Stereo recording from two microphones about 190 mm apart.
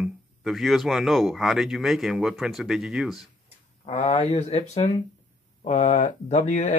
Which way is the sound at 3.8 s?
35° left (ahead or behind).